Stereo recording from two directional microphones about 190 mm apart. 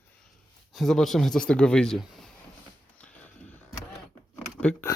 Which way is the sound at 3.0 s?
5° left (ahead or behind).